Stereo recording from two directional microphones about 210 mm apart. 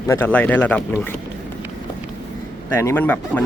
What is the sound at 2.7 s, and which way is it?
Speech, 10° left (ahead or behind).